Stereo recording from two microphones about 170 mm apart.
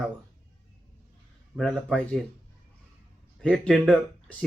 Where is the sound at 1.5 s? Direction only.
Centre (ahead or behind).